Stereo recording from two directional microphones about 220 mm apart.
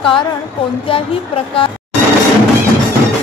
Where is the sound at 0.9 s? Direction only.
25° left (ahead or behind).